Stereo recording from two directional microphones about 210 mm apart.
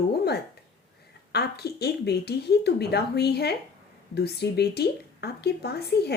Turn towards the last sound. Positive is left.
turn(degrees=50)  # may be behind; listen again after turning